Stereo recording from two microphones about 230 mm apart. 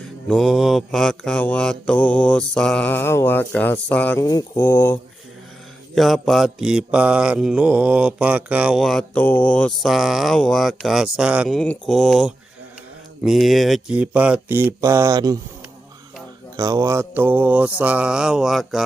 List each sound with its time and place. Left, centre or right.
0.3 s mantra: centre
16.6 s mantra: centre